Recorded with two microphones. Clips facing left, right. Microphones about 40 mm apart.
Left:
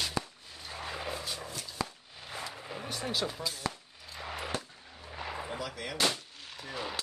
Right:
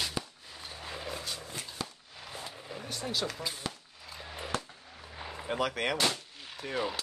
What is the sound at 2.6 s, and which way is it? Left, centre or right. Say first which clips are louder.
Vehicle: left 1 dB; left.